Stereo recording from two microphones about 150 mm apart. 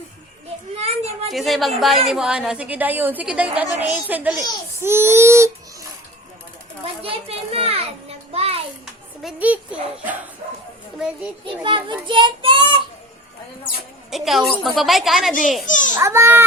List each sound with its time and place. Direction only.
0.8 s a sound: 45° right (ahead or behind)
1.3 s a woman's voice: centre (ahead or behind); by 5.5 s 15° right (ahead or behind)
7.0 s a child's voice: 40° right (ahead or behind)
8.3 s a sound: 40° right (ahead or behind)
9.2 s a woman's voice: 10° right (ahead or behind)
11.4 s a child's voice: 35° right (ahead or behind)
14.1 s a woman's voice: centre (ahead or behind)
15.6 s a child's voice: 60° left (ahead or behind)
16.0 s a woman's voice: 20° right (ahead or behind)